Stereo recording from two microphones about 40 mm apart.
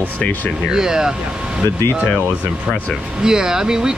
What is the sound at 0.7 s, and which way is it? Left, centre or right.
Speech, centre.